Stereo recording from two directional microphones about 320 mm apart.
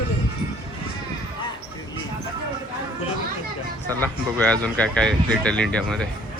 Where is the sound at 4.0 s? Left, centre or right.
Centre.